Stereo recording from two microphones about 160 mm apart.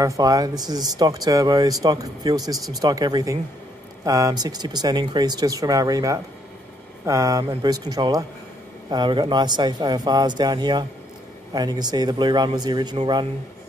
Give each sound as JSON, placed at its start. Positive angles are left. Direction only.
{"t": 0.0, "sound": "speech", "side_deg": -20}